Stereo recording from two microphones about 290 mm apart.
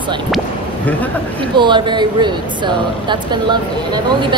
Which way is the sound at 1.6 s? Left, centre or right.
Centre.